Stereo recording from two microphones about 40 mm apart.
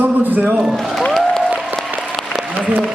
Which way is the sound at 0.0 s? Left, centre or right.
Right.